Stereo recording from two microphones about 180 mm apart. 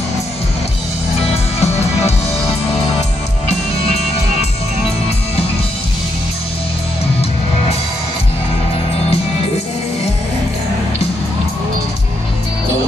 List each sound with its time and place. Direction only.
1.6 s music: 35° left (ahead or behind)